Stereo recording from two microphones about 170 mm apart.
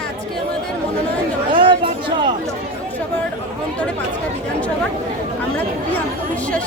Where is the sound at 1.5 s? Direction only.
30° right (ahead or behind).